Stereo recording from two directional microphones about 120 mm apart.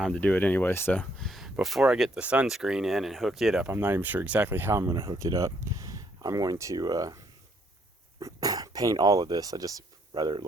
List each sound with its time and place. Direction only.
0.0 s speech: 10° left (ahead or behind)
1.2 s a sound: centre (ahead or behind)
1.6 s speech: 5° right (ahead or behind)
3.7 s speech: 20° right (ahead or behind)
8.2 s speech: 30° right (ahead or behind)